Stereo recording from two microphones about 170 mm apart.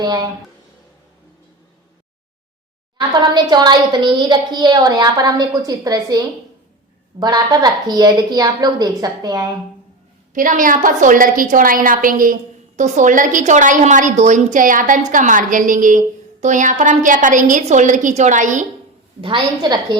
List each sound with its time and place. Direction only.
0.0 s a woman's voice: 25° right (ahead or behind)
3.2 s a woman's voice: 25° right (ahead or behind)
10.3 s a woman's voice: 50° right (ahead or behind)
19.2 s a woman's voice: 25° right (ahead or behind)